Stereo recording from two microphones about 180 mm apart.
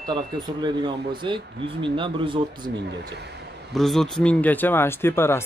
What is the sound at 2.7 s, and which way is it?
Speech, 70° right (ahead or behind).